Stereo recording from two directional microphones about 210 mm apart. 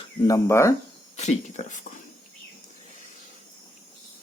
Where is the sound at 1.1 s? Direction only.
30° left (ahead or behind).